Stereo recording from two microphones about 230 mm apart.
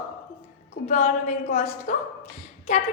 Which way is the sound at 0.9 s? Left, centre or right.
Left.